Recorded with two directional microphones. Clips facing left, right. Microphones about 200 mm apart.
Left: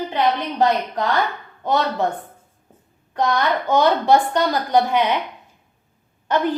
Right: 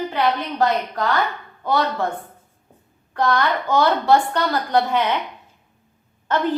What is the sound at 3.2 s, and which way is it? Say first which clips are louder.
A woman's voice: even; 20° left (ahead or behind).